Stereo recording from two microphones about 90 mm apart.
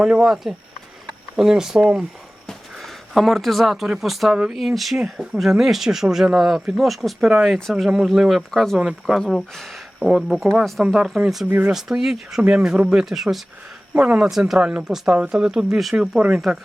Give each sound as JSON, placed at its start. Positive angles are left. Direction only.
{"t": 0.0, "sound": "speech", "side_deg": -5}
{"t": 2.5, "sound": "speech", "side_deg": 0}
{"t": 11.4, "sound": "speech", "side_deg": -20}
{"t": 11.7, "sound": "speech", "side_deg": -5}